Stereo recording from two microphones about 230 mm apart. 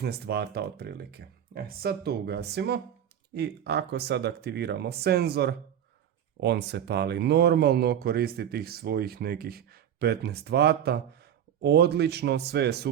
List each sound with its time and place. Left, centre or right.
0.0 s speech: right